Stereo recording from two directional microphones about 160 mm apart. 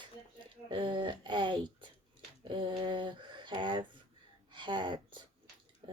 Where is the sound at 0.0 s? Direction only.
30° right (ahead or behind).